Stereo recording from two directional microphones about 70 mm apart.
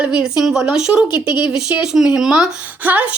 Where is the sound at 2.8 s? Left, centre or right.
Right.